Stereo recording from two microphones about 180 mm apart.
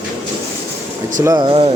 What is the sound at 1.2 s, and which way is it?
Speech, 25° right (ahead or behind).